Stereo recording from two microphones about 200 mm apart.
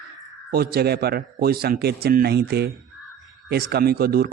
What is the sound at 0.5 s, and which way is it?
Speech, 50° right (ahead or behind).